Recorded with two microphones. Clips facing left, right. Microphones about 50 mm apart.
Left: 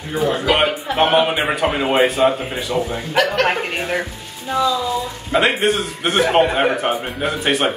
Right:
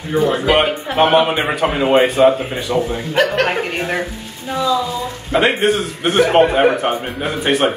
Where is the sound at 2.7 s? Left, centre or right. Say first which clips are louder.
Right 2 dB; right.